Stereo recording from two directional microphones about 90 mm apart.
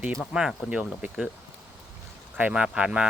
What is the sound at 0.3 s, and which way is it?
Speech, 10° right (ahead or behind).